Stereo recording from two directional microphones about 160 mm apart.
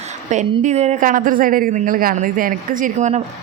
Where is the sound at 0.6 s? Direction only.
45° right (ahead or behind).